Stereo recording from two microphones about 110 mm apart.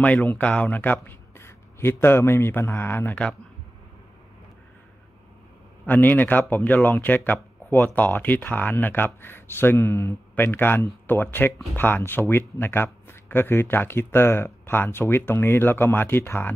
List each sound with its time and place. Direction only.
0.0 s speech: 15° left (ahead or behind)
5.9 s speech: 15° left (ahead or behind)